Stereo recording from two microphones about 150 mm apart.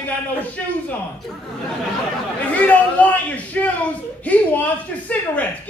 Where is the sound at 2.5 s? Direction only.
10° left (ahead or behind).